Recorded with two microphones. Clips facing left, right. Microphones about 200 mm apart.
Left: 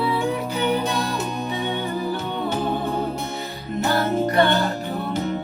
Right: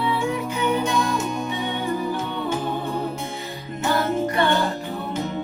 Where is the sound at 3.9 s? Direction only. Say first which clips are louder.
Even; 35° left (ahead or behind).